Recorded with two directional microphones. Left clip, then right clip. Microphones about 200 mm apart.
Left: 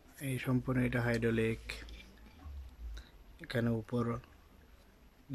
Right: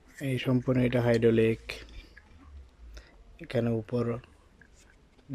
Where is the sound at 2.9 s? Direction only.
5° right (ahead or behind).